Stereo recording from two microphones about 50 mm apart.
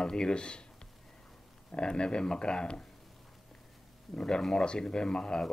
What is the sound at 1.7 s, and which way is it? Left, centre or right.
Speech, centre.